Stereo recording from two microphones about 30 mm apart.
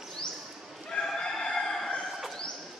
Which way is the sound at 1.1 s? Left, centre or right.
Left.